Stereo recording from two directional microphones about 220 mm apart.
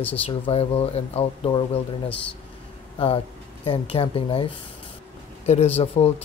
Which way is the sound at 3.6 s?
25° left (ahead or behind).